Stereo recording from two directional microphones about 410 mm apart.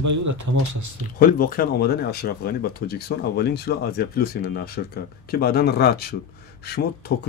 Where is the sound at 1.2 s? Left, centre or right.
Left.